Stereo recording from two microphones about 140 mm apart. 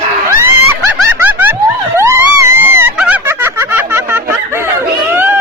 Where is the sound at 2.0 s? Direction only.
20° right (ahead or behind).